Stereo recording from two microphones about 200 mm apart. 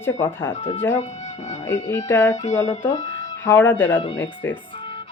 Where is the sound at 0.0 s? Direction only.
10° left (ahead or behind).